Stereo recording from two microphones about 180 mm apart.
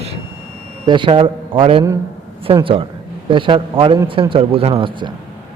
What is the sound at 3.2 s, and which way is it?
A woman's voice, 25° right (ahead or behind).